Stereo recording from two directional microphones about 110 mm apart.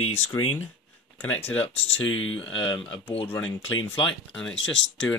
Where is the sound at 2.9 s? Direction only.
55° left (ahead or behind).